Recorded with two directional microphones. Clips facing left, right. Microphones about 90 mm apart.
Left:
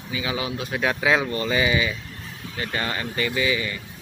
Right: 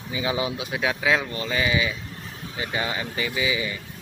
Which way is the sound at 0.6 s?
5° right (ahead or behind).